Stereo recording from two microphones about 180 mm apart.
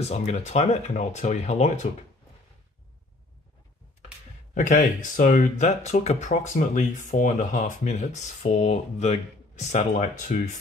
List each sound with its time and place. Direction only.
0.0 s speech: 35° left (ahead or behind)
4.6 s speech: 45° left (ahead or behind)